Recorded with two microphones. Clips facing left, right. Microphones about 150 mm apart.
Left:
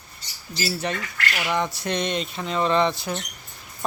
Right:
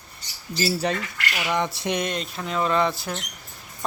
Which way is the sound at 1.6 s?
25° right (ahead or behind).